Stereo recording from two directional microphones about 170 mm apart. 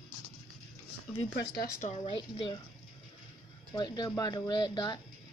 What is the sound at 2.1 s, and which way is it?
Speech, 30° left (ahead or behind).